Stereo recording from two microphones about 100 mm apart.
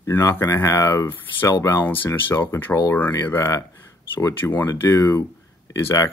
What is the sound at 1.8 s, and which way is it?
Speech, 20° left (ahead or behind).